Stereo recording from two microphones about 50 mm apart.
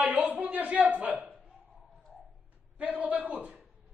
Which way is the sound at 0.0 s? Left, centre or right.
Right.